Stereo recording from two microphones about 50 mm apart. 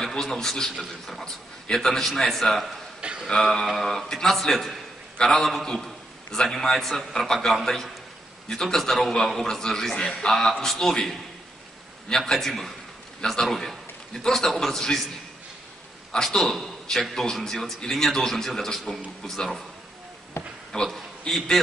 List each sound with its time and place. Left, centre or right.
0.0 s a man's voice: centre
3.0 s a sound: centre
3.7 s a man's voice: centre
16.1 s a man's voice: centre
20.4 s a sound: left
20.7 s a man's voice: centre